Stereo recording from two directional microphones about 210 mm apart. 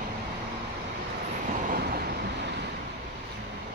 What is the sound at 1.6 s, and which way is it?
Vehicle, 45° right (ahead or behind).